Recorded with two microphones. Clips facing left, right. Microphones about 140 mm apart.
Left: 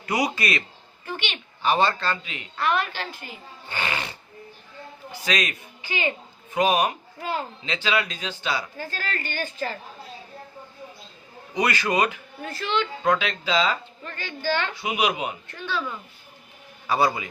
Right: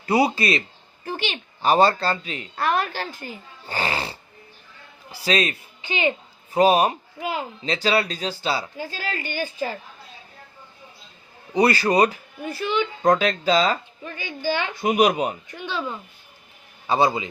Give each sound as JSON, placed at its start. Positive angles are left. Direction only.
{"t": 0.0, "sound": "a man's voice", "side_deg": -30}
{"t": 6.5, "sound": "a woman's voice", "side_deg": -35}
{"t": 7.2, "sound": "a woman's voice", "side_deg": -15}
{"t": 7.6, "sound": "a woman's voice", "side_deg": -35}
{"t": 8.8, "sound": "a woman's voice", "side_deg": -15}
{"t": 11.5, "sound": "a woman's voice", "side_deg": -35}
{"t": 12.4, "sound": "a woman's voice", "side_deg": -10}
{"t": 13.0, "sound": "a woman's voice", "side_deg": -40}
{"t": 14.0, "sound": "a woman's voice", "side_deg": -10}
{"t": 14.7, "sound": "speech", "side_deg": -45}
{"t": 15.4, "sound": "a woman's voice", "side_deg": -15}